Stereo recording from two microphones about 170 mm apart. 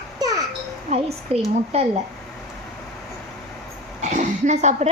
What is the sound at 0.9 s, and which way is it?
Speech, 40° right (ahead or behind).